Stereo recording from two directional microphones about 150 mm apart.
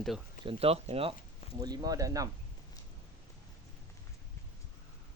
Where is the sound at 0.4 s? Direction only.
40° right (ahead or behind).